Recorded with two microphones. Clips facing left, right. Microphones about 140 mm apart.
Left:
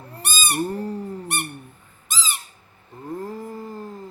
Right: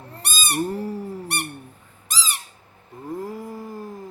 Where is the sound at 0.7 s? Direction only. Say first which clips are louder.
Even; 10° right (ahead or behind).